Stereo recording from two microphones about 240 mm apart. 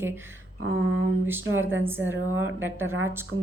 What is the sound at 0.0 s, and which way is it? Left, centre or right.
Speech, centre.